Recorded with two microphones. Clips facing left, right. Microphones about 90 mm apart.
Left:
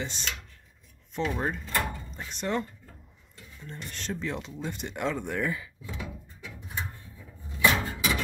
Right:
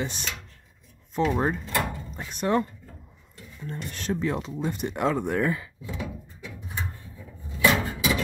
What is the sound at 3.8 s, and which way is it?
Speech, 50° right (ahead or behind).